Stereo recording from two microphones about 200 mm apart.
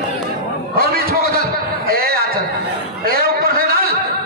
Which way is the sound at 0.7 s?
50° right (ahead or behind).